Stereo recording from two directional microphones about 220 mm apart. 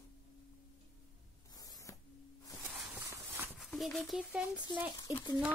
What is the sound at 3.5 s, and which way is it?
Speech, centre (ahead or behind).